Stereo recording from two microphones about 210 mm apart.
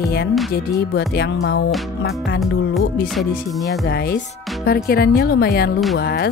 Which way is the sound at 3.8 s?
45° left (ahead or behind).